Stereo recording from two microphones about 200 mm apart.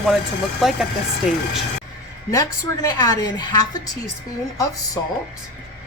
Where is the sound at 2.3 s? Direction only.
20° left (ahead or behind).